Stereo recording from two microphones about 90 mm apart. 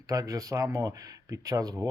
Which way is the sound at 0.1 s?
40° right (ahead or behind).